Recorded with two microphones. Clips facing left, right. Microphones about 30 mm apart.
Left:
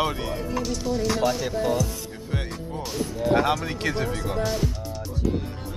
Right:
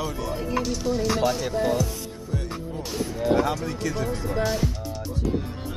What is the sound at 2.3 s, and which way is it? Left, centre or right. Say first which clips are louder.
Music: left 1 dB; left.